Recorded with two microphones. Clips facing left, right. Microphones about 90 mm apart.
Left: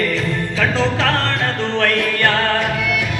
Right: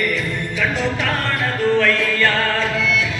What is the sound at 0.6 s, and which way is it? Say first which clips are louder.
Music: left 3 dB; 80° left.